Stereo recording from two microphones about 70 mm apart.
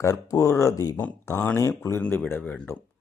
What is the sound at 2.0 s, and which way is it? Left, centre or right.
Speech, left.